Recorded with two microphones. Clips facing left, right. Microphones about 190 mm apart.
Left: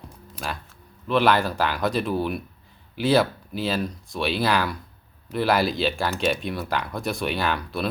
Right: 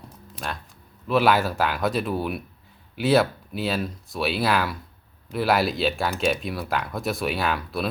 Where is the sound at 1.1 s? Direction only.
5° right (ahead or behind).